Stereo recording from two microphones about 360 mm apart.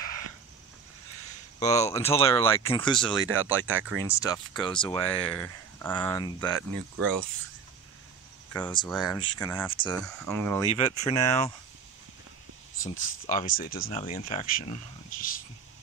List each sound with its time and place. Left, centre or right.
1.6 s speech: centre
3.5 s speech: centre
4.1 s speech: centre
8.5 s speech: centre
10.7 s speech: centre
13.3 s speech: left